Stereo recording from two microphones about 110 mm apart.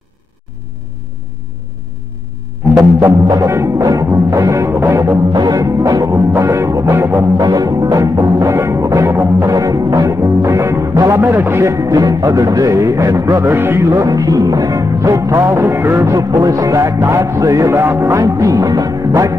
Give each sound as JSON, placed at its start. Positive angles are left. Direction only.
{"t": 2.7, "sound": "music", "side_deg": -30}
{"t": 5.3, "sound": "music", "side_deg": -40}
{"t": 7.3, "sound": "music", "side_deg": -35}